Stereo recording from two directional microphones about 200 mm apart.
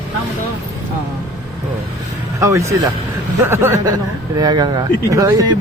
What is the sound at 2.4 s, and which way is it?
Speech, 15° right (ahead or behind).